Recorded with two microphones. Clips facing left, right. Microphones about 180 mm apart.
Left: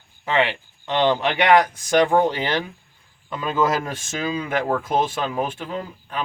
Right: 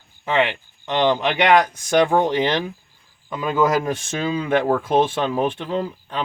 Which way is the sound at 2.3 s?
20° right (ahead or behind).